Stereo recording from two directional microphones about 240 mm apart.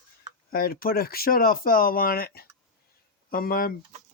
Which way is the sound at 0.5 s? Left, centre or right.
Left.